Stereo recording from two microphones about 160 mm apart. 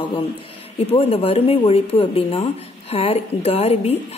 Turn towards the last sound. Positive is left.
turn(degrees=40)  # may be behind; listen again after turning